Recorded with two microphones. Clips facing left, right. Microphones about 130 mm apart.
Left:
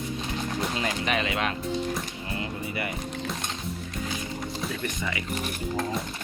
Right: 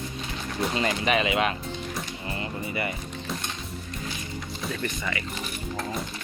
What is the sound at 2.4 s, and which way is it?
Music, centre (ahead or behind).